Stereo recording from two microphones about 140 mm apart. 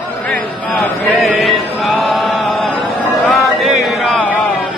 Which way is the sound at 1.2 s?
Centre (ahead or behind).